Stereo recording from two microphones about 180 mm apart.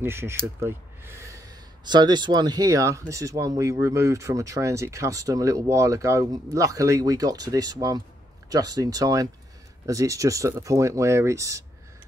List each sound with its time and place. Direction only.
0.0 s speech: 15° right (ahead or behind)